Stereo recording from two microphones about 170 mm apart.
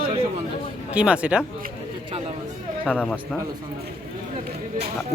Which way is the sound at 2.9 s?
5° left (ahead or behind).